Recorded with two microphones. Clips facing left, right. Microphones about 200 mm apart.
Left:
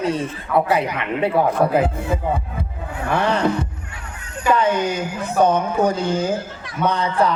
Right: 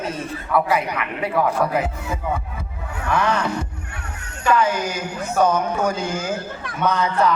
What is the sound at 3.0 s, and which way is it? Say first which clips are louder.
Heart sounds: left 1 dB; 30° left (ahead or behind).